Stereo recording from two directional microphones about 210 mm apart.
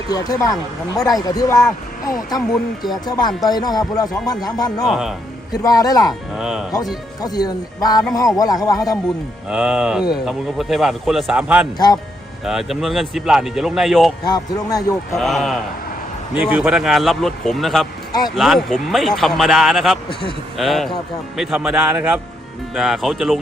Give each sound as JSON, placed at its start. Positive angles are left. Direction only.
{"t": 0.1, "sound": "speech", "side_deg": 15}
{"t": 2.5, "sound": "speech", "side_deg": 0}
{"t": 3.1, "sound": "speech", "side_deg": 20}
{"t": 4.9, "sound": "speech", "side_deg": 0}
{"t": 5.5, "sound": "speech", "side_deg": 15}
{"t": 6.1, "sound": "speech", "side_deg": -5}
{"t": 7.2, "sound": "speech", "side_deg": 20}
{"t": 9.5, "sound": "speech", "side_deg": -5}
{"t": 14.3, "sound": "speech", "side_deg": 15}
{"t": 15.1, "sound": "speech", "side_deg": 0}